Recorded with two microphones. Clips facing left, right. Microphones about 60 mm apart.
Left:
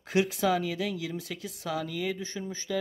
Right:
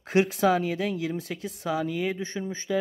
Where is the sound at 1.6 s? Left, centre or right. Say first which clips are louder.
Right 4 dB; right.